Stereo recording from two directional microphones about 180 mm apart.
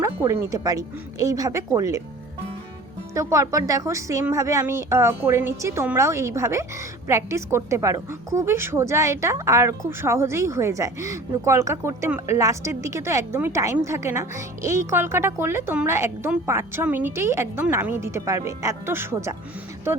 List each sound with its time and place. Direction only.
0.0 s a woman's voice: 15° right (ahead or behind)
3.2 s a woman's voice: 15° right (ahead or behind)